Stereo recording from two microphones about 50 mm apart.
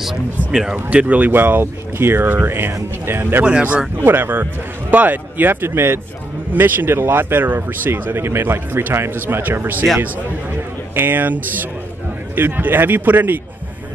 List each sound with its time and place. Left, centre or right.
0.4 s speech: left
0.8 s speech: right
3.4 s speech: right
4.0 s speech: right
11.0 s speech: right